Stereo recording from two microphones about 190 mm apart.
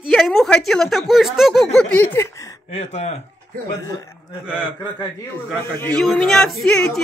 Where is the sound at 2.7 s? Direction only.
35° left (ahead or behind).